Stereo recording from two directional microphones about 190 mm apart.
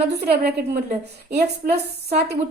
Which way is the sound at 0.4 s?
55° right (ahead or behind).